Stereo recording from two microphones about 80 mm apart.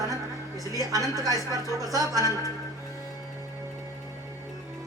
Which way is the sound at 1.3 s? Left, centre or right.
Left.